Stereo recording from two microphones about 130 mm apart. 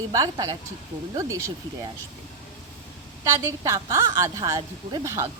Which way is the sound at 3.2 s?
20° right (ahead or behind).